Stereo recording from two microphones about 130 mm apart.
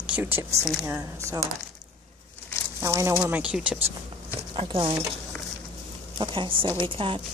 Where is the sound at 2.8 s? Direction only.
20° right (ahead or behind).